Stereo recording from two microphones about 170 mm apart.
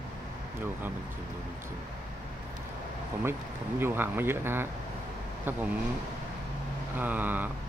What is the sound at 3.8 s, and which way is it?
Speech, 15° right (ahead or behind).